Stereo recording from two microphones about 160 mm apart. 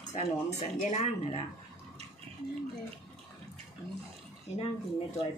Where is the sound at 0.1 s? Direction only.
45° left (ahead or behind).